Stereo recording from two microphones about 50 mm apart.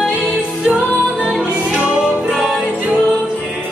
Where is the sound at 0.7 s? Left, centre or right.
Centre.